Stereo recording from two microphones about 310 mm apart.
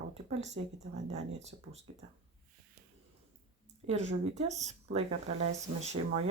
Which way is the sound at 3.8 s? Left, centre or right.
Right.